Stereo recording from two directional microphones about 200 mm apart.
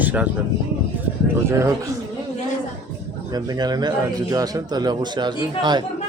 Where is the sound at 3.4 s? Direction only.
20° right (ahead or behind).